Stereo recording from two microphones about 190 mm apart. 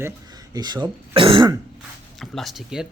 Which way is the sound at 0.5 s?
20° right (ahead or behind).